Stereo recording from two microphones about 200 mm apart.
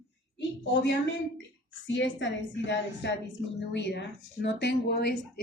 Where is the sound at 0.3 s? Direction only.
60° left (ahead or behind).